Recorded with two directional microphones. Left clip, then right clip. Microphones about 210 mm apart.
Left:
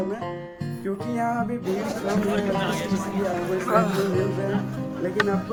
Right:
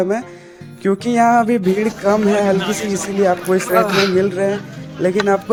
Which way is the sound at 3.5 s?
50° right (ahead or behind).